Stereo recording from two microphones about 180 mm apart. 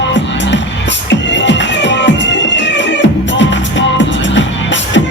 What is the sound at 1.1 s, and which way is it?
Music, 80° left.